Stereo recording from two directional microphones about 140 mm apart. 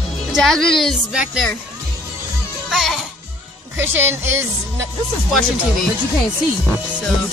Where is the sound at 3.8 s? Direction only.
15° right (ahead or behind).